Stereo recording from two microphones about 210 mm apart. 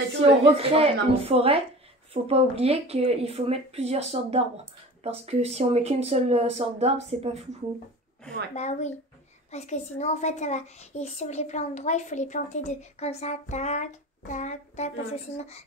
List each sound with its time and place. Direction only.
0.4 s speech: 25° right (ahead or behind)
8.5 s a woman's voice: 30° left (ahead or behind)